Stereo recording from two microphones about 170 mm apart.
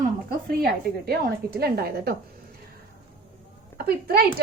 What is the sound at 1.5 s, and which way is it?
Speech, 65° right (ahead or behind).